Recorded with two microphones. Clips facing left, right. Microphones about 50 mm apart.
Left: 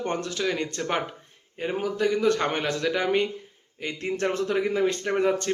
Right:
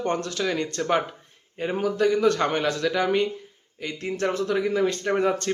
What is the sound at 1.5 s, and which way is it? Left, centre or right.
Speech, centre.